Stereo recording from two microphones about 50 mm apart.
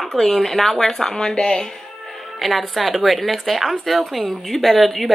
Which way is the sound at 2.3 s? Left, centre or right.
Centre.